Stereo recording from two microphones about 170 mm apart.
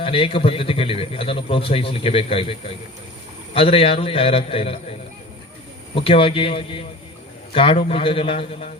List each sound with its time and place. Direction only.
0.0 s speech: 35° left (ahead or behind)